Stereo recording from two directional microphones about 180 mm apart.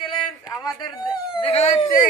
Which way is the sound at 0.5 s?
20° left (ahead or behind).